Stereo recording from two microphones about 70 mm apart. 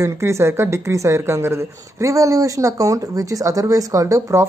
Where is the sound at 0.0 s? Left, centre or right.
Right.